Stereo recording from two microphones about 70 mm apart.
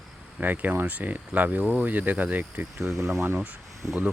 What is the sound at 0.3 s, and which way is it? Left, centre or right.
Speech, right.